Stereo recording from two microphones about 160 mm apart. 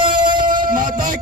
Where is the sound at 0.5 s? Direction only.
60° right (ahead or behind).